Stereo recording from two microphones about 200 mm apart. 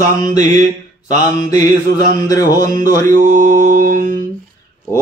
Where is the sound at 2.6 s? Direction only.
40° right (ahead or behind).